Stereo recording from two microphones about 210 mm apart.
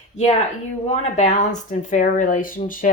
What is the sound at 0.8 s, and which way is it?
Speech, 30° left (ahead or behind).